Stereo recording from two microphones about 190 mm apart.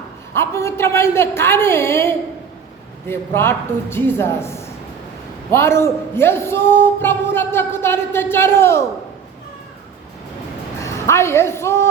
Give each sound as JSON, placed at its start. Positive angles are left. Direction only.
{"t": 0.3, "sound": "speech", "side_deg": 15}
{"t": 10.8, "sound": "a woman's voice", "side_deg": 15}